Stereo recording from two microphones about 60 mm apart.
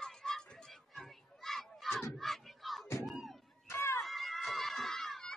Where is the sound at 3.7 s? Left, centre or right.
Left.